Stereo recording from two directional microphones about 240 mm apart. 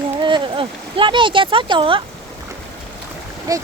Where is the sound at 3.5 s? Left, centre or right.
Centre.